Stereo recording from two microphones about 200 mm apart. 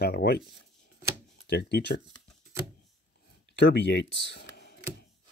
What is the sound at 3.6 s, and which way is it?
Speech, 60° left (ahead or behind).